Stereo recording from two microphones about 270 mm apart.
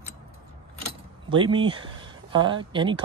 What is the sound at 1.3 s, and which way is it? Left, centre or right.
Speech, centre.